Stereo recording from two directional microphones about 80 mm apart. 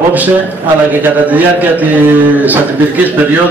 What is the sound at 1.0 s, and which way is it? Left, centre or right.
A man's voice, right.